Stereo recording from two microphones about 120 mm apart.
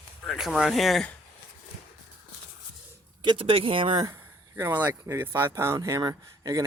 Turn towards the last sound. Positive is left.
turn(degrees=-30)  # may be behind; listen again after turning